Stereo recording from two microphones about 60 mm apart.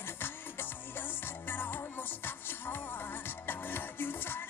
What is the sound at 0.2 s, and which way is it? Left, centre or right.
Music, left.